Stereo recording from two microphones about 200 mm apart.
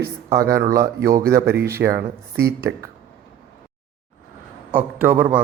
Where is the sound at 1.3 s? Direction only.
55° right (ahead or behind).